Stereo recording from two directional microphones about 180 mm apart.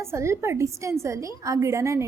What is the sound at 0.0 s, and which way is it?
A woman's voice, 15° right (ahead or behind).